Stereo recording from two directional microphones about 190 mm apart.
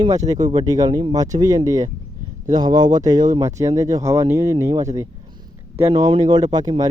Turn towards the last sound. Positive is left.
turn(degrees=-20)  # may be behind; listen again after turning